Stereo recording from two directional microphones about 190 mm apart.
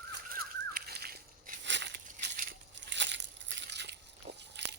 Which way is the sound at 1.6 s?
70° right (ahead or behind).